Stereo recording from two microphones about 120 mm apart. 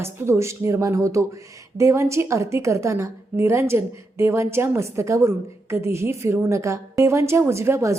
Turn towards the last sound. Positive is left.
turn(degrees=-25)  # may be behind; listen again after turning